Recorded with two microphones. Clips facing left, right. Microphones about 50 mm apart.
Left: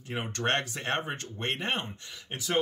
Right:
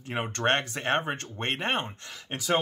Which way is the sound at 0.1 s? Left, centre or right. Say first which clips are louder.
Right 3 dB; right.